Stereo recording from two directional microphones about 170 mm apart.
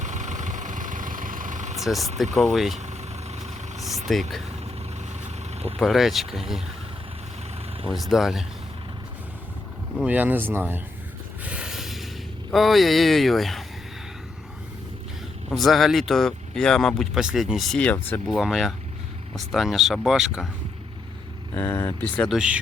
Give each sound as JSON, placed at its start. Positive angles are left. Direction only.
{"t": 0.0, "sound": "vehicle", "side_deg": -45}
{"t": 1.8, "sound": "speech", "side_deg": 0}
{"t": 2.7, "sound": "vehicle", "side_deg": -40}
{"t": 4.1, "sound": "speech", "side_deg": 0}
{"t": 5.8, "sound": "speech", "side_deg": 0}
{"t": 7.9, "sound": "speech", "side_deg": 0}
{"t": 10.0, "sound": "speech", "side_deg": -10}
{"t": 11.4, "sound": "a sound", "side_deg": -5}
{"t": 12.5, "sound": "speech", "side_deg": 0}
{"t": 15.4, "sound": "speech", "side_deg": 0}
{"t": 18.3, "sound": "speech", "side_deg": 0}
{"t": 21.5, "sound": "speech", "side_deg": 15}
{"t": 22.4, "sound": "speech", "side_deg": -5}